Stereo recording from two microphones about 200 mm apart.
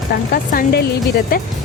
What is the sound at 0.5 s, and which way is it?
Speech, 55° left (ahead or behind).